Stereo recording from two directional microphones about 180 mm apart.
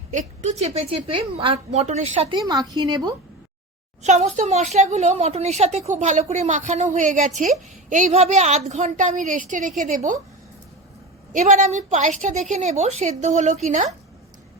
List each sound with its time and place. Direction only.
0.1 s a woman's voice: 45° right (ahead or behind); by 3.2 s 25° right (ahead or behind)
4.0 s a woman's voice: 40° right (ahead or behind)
11.3 s a woman's voice: 40° right (ahead or behind)